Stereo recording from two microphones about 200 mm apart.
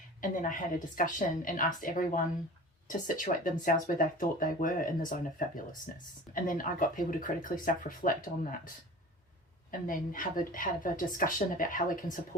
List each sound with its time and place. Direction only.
0.2 s a woman's voice: 40° left (ahead or behind)
9.8 s speech: 45° left (ahead or behind)